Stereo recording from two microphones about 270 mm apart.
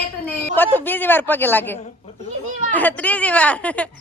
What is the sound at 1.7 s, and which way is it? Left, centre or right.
Speech, left.